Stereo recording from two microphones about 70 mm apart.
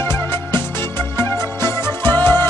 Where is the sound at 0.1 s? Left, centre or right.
Left.